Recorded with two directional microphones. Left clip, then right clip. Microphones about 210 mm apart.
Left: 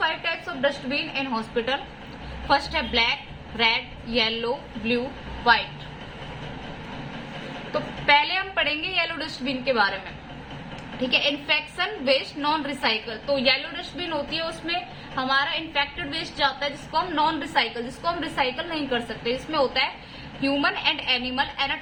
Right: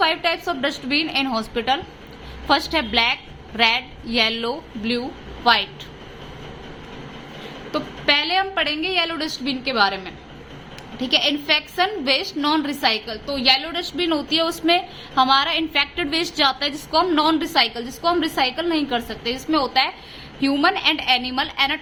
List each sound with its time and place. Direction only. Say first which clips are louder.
0.0 s a woman's voice: right 6 dB; 50° right (ahead or behind)
7.7 s a woman's voice: even; 45° right (ahead or behind)
11.1 s a woman's voice: right 4 dB; 40° right (ahead or behind)